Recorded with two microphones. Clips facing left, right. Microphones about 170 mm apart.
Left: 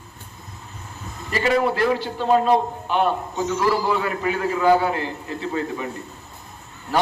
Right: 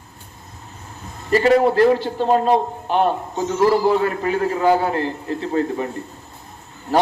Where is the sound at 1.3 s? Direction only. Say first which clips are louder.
Right 6 dB; 40° right (ahead or behind).